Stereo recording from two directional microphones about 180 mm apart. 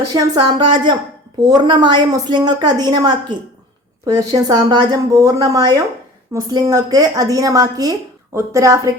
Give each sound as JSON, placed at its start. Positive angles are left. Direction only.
{"t": 0.1, "sound": "a woman's voice", "side_deg": -25}